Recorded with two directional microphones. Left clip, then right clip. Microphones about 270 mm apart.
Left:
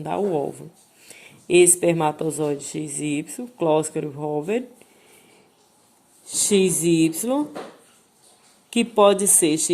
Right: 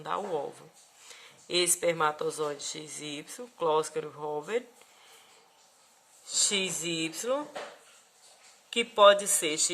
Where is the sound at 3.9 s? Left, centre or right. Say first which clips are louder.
Left 8 dB; right.